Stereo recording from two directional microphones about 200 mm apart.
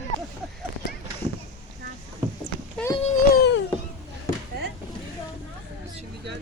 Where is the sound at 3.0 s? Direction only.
40° left (ahead or behind).